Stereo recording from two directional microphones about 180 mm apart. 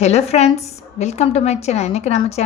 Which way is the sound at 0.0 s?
35° left (ahead or behind).